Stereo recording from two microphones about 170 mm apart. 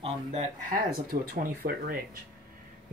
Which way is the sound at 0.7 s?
60° right (ahead or behind).